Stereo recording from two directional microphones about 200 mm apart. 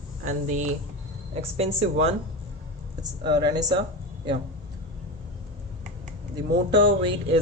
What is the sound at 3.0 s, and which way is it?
Speech, 20° right (ahead or behind).